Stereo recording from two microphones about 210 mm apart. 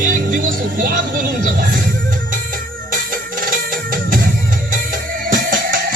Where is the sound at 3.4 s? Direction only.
40° right (ahead or behind).